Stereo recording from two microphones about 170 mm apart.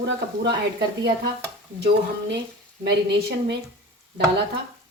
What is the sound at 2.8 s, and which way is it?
Speech, 75° right (ahead or behind).